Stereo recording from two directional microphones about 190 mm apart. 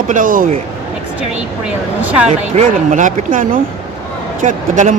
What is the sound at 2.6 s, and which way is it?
Speech, 40° right (ahead or behind).